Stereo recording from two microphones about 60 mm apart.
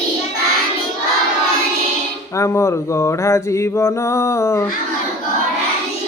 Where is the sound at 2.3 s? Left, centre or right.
Left.